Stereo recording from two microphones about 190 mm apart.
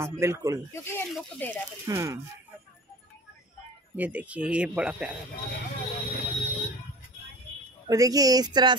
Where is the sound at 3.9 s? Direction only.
10° right (ahead or behind).